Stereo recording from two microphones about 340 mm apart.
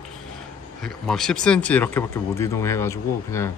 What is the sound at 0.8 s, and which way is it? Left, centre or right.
A man's voice, centre.